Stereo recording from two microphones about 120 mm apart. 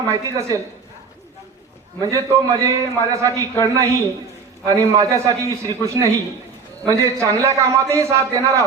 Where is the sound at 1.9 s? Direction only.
25° right (ahead or behind).